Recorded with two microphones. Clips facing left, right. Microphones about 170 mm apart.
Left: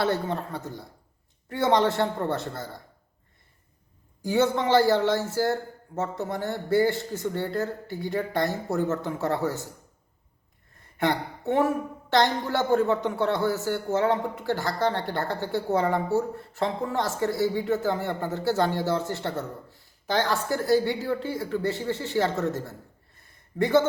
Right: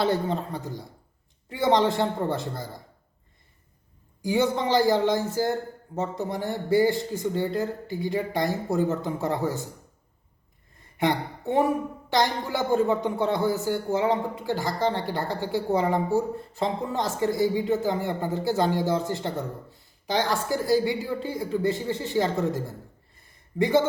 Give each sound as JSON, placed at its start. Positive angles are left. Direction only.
{"t": 0.0, "sound": "a man's voice", "side_deg": -20}
{"t": 4.2, "sound": "a man's voice", "side_deg": -15}
{"t": 10.9, "sound": "a woman's voice", "side_deg": -15}